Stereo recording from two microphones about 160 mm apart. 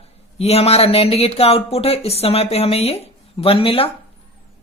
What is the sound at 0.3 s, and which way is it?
Speech, 40° left (ahead or behind).